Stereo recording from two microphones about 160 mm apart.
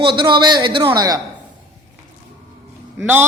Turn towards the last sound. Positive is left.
turn(degrees=-10)  # may be behind; listen again after turning